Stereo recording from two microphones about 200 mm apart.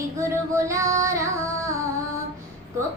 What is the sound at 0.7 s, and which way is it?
Child singing, 15° right (ahead or behind).